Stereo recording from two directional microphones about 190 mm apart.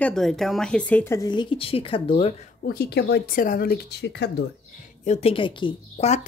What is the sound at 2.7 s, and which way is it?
Speech, 55° left (ahead or behind).